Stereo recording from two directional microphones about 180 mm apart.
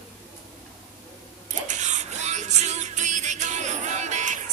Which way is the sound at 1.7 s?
40° right (ahead or behind).